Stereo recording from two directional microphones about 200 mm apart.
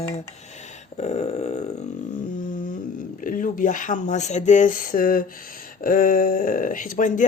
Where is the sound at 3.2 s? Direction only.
40° left (ahead or behind).